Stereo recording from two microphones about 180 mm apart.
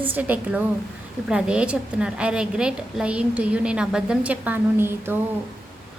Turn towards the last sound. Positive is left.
turn(degrees=-10)  # may be behind; listen again after turning